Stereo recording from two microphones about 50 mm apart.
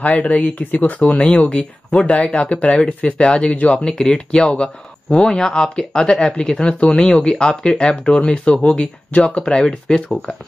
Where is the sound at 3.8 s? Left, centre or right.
Centre.